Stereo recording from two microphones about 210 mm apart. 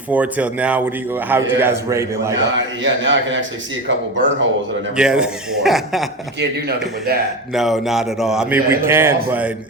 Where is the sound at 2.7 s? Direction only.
60° right (ahead or behind).